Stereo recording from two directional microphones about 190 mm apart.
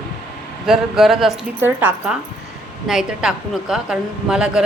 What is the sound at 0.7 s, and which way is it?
A woman's voice, centre (ahead or behind).